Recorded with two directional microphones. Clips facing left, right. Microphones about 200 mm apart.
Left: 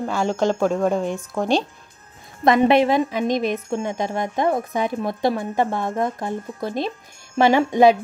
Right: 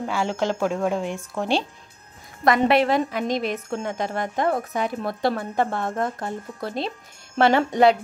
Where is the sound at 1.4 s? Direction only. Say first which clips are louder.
Left 3 dB; 15° left (ahead or behind).